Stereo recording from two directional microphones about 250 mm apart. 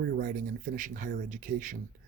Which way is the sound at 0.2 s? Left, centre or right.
Right.